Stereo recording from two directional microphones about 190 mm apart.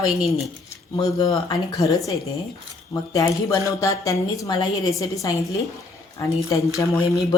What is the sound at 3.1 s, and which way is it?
A woman's voice, 15° left (ahead or behind).